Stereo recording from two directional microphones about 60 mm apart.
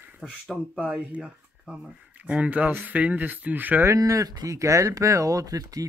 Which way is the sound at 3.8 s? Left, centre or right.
Right.